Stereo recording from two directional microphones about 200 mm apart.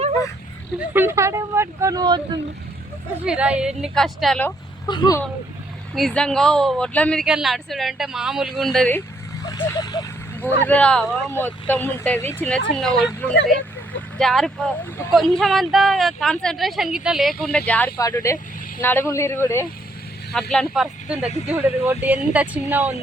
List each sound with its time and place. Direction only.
0.9 s speech: 15° right (ahead or behind)
3.2 s speech: 5° right (ahead or behind)
4.9 s speech: 20° left (ahead or behind)
5.9 s speech: centre (ahead or behind)
9.5 s speech: 20° left (ahead or behind); by 13.1 s centre (ahead or behind)
14.2 s speech: centre (ahead or behind)
20.5 s speech: centre (ahead or behind)